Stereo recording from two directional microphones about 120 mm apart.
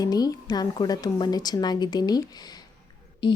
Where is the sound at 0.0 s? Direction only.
30° left (ahead or behind).